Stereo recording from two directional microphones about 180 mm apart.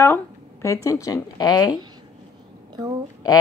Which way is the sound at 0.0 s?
15° left (ahead or behind).